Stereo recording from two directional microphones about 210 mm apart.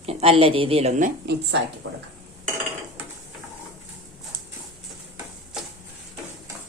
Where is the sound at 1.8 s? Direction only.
70° right (ahead or behind).